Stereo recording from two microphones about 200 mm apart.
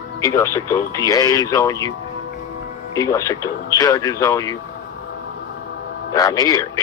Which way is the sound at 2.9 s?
15° left (ahead or behind).